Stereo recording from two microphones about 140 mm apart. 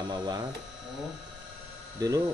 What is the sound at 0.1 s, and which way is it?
Speech, 30° right (ahead or behind).